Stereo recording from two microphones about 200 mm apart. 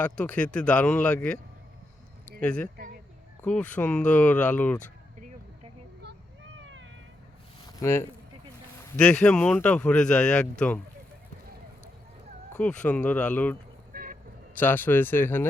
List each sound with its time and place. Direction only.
0.0 s speech: 5° left (ahead or behind)
2.4 s speech: 5° left (ahead or behind)
2.7 s a sound: 50° right (ahead or behind)
3.4 s speech: 5° left (ahead or behind)
7.8 s speech: 15° left (ahead or behind)
12.8 s speech: 5° left (ahead or behind)
13.9 s vehicle: 45° right (ahead or behind)
14.5 s speech: 10° left (ahead or behind)